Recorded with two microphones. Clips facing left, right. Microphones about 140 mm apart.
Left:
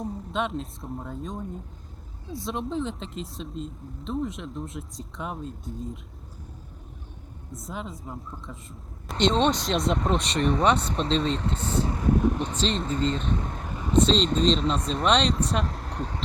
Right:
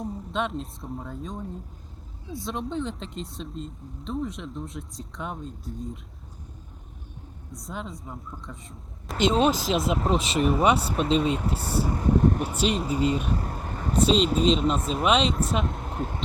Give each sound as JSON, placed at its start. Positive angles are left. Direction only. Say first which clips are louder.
{"t": 0.0, "sound": "speech", "louder": "even", "side_deg": 0}
{"t": 7.5, "sound": "speech", "louder": "even", "side_deg": 0}
{"t": 11.9, "sound": "speech", "louder": "right 1 dB", "side_deg": -30}
{"t": 12.2, "sound": "speech", "louder": "right 2 dB", "side_deg": -10}